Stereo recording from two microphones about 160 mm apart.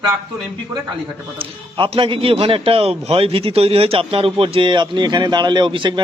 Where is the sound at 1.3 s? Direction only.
35° right (ahead or behind).